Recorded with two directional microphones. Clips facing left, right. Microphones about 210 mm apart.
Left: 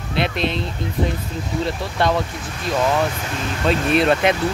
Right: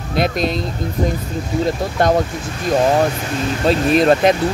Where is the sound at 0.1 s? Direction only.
40° right (ahead or behind).